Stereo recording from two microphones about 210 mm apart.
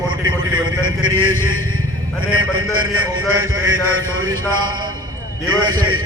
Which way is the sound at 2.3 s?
80° right.